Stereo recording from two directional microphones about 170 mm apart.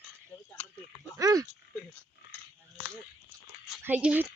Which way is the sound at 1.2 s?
20° right (ahead or behind).